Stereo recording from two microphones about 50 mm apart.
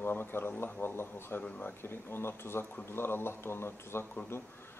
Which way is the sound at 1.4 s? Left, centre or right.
Left.